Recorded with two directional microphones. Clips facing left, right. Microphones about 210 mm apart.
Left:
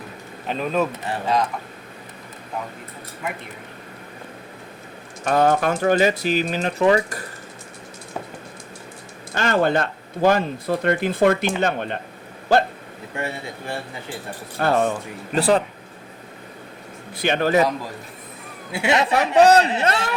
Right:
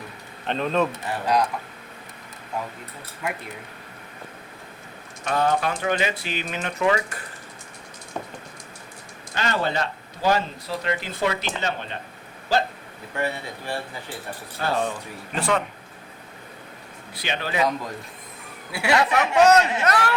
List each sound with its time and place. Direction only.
0.4 s speech: 5° left (ahead or behind)
3.2 s speech: centre (ahead or behind)
5.2 s speech: 45° left (ahead or behind)
9.3 s speech: 50° left (ahead or behind)
13.1 s speech: 25° left (ahead or behind)
14.6 s speech: 50° left (ahead or behind)
15.4 s speech: 35° left (ahead or behind)
17.2 s speech: 50° left (ahead or behind)
18.7 s speech: 25° left (ahead or behind)
19.2 s speech: 35° left (ahead or behind)